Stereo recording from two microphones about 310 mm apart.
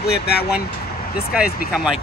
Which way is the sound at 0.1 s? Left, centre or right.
Left.